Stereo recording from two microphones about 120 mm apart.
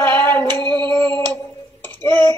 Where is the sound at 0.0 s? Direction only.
15° left (ahead or behind).